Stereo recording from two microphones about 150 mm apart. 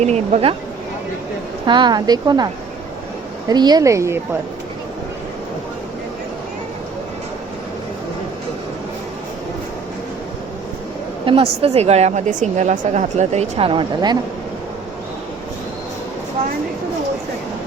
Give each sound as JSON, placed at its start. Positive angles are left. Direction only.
{"t": 0.0, "sound": "a woman's voice", "side_deg": -45}
{"t": 1.6, "sound": "speech", "side_deg": -30}
{"t": 3.5, "sound": "speech", "side_deg": -25}
{"t": 11.3, "sound": "a woman's voice", "side_deg": -40}